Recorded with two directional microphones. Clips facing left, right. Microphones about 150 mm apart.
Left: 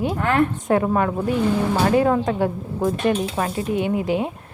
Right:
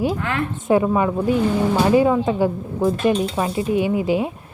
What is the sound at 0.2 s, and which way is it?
Speech, 45° left (ahead or behind).